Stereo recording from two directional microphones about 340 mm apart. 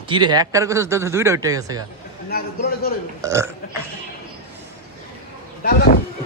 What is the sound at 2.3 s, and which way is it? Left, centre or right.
Speech, left.